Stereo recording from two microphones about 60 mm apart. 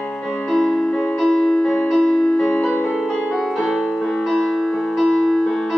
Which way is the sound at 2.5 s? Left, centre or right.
Left.